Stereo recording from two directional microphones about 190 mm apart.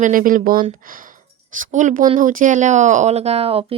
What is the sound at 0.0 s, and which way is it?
Speech, 45° right (ahead or behind).